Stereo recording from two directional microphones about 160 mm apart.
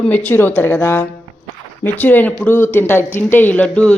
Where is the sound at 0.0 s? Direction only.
10° left (ahead or behind).